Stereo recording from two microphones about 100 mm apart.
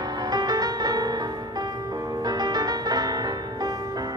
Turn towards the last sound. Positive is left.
turn(degrees=-40)  # may be behind; listen again after turning